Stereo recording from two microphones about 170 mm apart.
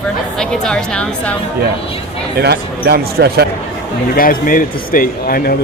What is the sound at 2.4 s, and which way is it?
Speech, 70° right (ahead or behind).